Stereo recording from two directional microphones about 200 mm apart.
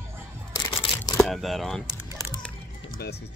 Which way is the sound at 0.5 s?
25° left (ahead or behind).